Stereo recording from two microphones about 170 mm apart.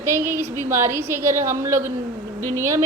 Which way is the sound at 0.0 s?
15° right (ahead or behind).